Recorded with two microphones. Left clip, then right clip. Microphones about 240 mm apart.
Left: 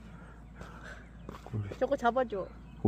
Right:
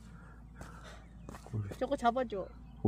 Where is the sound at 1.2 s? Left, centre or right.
Right.